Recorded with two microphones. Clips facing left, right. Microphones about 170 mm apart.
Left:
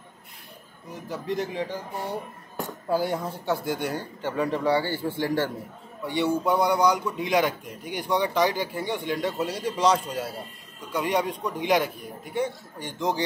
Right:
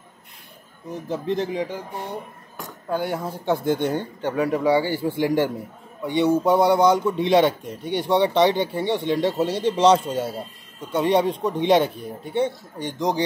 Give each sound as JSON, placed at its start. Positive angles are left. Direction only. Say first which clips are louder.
{"t": 1.0, "sound": "a man's voice", "louder": "right 4 dB", "side_deg": -25}
{"t": 2.9, "sound": "speech", "louder": "even", "side_deg": 0}
{"t": 3.3, "sound": "a man's voice", "louder": "right 5 dB", "side_deg": -20}